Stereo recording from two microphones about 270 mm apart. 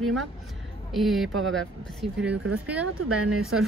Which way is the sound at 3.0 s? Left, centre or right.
Right.